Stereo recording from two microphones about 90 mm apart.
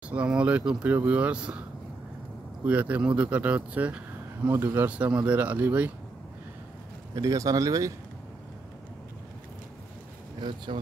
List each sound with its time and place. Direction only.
0.1 s speech: 10° right (ahead or behind)
2.6 s speech: 15° right (ahead or behind)
7.2 s speech: 40° right (ahead or behind)
10.4 s speech: 55° right (ahead or behind)